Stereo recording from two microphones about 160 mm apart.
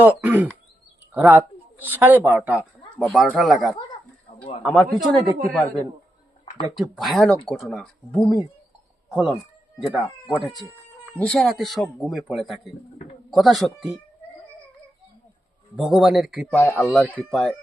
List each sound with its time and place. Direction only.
0.0 s speech: 10° right (ahead or behind)
3.0 s speech: 5° left (ahead or behind)
6.4 s a sound: 30° left (ahead or behind)
6.7 s speech: centre (ahead or behind)
10.8 s speech: 10° left (ahead or behind)
15.7 s speech: 5° right (ahead or behind)
16.5 s speech: 15° left (ahead or behind)
16.9 s speech: 5° left (ahead or behind)